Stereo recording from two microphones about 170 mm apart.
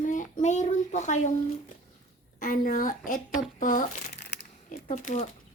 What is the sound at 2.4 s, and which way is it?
A child's voice, 55° left (ahead or behind).